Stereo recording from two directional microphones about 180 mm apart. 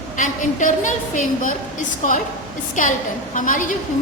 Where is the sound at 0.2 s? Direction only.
45° left (ahead or behind).